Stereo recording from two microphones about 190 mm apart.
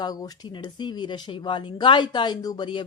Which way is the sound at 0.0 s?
20° left (ahead or behind).